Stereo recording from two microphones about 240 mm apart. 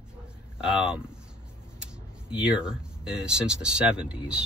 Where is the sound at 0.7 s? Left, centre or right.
Centre.